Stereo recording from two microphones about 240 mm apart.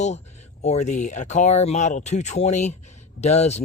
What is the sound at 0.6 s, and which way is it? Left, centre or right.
Speech, left.